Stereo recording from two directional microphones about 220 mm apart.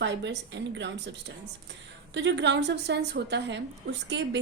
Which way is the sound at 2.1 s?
55° right (ahead or behind).